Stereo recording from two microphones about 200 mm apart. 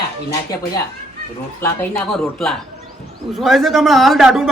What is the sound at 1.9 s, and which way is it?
A man's voice, 5° left (ahead or behind).